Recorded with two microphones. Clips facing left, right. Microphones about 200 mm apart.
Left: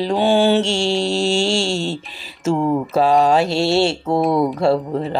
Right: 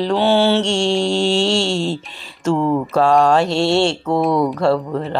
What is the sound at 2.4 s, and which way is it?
Speech, 10° left (ahead or behind).